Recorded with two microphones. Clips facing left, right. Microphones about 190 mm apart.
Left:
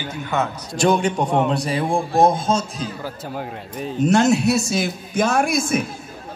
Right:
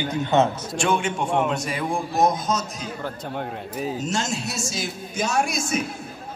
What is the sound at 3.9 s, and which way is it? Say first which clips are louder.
A man's voice: left 11 dB; 60° left (ahead or behind).